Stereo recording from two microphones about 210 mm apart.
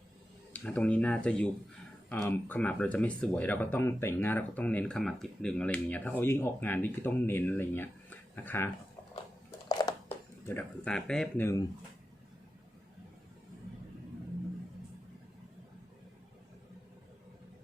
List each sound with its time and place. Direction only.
0.5 s speech: 5° left (ahead or behind)
9.6 s a sound: 20° left (ahead or behind)
10.4 s speech: 10° left (ahead or behind)